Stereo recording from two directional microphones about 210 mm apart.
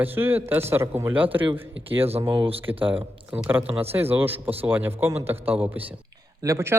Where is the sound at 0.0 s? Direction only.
10° right (ahead or behind).